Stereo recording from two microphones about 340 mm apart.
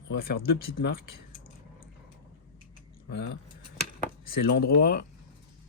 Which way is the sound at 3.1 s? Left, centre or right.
Left.